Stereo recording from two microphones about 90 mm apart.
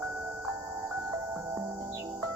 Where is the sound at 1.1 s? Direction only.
35° right (ahead or behind).